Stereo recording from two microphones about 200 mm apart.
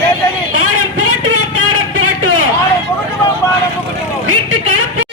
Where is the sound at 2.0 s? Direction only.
90° right.